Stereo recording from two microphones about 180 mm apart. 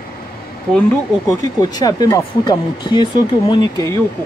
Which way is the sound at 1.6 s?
20° left (ahead or behind).